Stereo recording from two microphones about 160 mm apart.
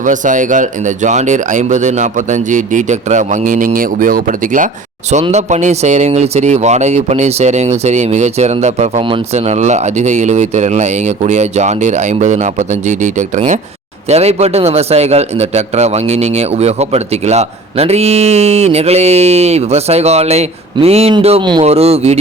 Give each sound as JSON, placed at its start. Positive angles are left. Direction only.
{"t": 0.0, "sound": "speech", "side_deg": -50}
{"t": 5.2, "sound": "a man's voice", "side_deg": -45}